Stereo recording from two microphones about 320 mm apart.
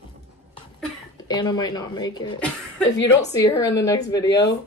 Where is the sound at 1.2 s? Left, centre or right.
Centre.